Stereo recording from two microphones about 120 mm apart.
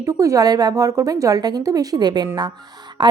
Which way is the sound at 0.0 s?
25° right (ahead or behind).